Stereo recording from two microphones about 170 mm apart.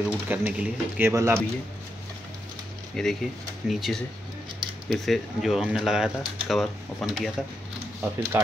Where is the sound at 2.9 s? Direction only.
Centre (ahead or behind).